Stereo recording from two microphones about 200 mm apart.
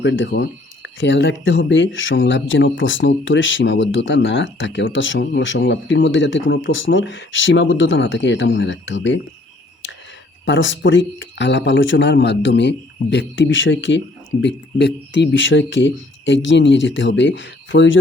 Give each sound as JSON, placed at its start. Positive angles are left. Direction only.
{"t": 0.0, "sound": "speech", "side_deg": 65}
{"t": 10.4, "sound": "speech", "side_deg": 70}